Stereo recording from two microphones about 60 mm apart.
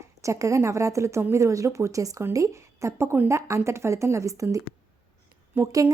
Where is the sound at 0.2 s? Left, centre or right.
Right.